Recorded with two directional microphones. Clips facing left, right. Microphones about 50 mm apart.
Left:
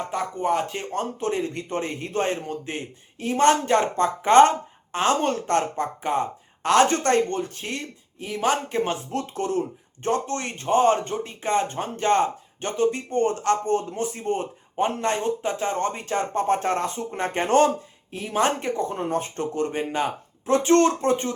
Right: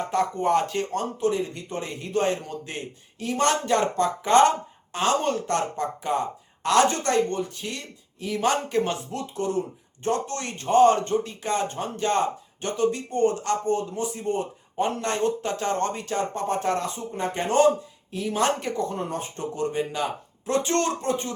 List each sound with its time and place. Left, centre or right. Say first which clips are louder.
0.1 s speech: right 3 dB; centre
0.7 s speech: right 4 dB; centre
0.9 s speech: even; left
8.3 s speech: even; left
9.1 s speech: left 3 dB; left; by 16.0 s centre
16.0 s speech: left 2 dB; left
17.1 s speech: left 4 dB; left
18.1 s speech: left 1 dB; left
19.1 s speech: left 5 dB; left
20.5 s speech: left 6 dB; left